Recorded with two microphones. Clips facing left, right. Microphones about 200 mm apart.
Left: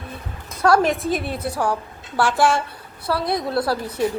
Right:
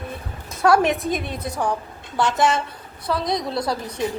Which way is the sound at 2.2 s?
20° right (ahead or behind).